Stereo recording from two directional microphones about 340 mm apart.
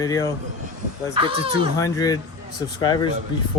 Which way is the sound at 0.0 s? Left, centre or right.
Centre.